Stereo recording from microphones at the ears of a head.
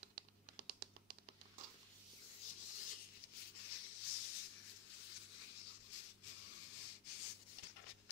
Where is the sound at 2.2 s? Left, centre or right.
Left.